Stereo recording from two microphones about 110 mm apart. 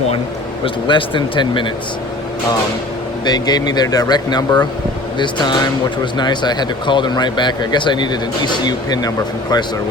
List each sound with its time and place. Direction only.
0.6 s speech: 50° left (ahead or behind)
3.2 s speech: 40° left (ahead or behind)